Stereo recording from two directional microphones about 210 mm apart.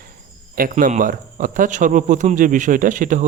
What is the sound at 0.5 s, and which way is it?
A man's voice, 40° right (ahead or behind).